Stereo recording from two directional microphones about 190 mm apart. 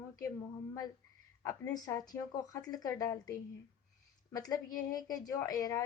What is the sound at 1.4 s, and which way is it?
A woman's voice, 15° left (ahead or behind).